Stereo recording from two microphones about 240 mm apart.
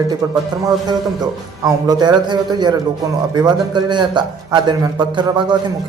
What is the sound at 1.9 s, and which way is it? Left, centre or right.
A man's voice, centre.